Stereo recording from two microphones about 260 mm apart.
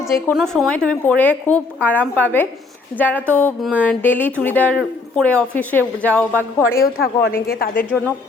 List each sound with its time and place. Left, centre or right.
0.0 s a woman's voice: centre
6.7 s a woman's voice: left